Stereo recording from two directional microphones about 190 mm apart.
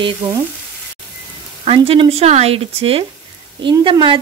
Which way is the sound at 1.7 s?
30° right (ahead or behind).